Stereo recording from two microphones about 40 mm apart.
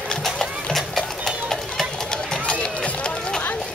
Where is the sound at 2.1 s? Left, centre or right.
Left.